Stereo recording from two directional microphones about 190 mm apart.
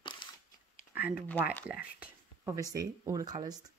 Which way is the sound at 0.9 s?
10° right (ahead or behind).